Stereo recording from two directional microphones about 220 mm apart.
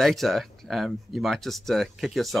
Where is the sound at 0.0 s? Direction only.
Centre (ahead or behind).